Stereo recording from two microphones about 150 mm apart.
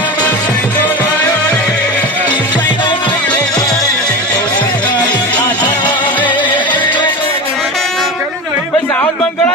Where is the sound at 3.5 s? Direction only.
25° left (ahead or behind).